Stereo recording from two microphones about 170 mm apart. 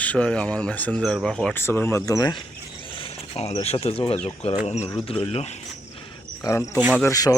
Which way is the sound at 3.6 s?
35° left (ahead or behind).